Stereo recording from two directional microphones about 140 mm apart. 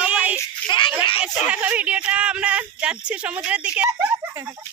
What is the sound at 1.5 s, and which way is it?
Speech, 10° right (ahead or behind).